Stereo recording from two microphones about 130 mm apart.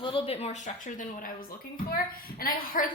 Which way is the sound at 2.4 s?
90° left.